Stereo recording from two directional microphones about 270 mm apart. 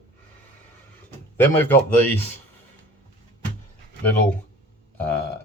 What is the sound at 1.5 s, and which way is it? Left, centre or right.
Speech, centre.